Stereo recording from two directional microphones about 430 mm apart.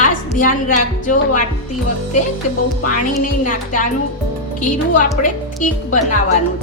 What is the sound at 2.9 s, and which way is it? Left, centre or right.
Speech, centre.